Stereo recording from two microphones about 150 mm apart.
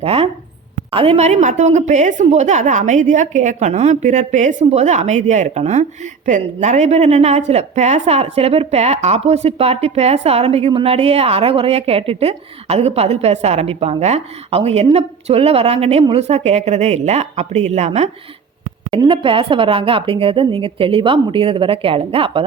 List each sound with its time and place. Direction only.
0.0 s a woman's voice: 40° right (ahead or behind)
18.9 s a woman's voice: 35° right (ahead or behind)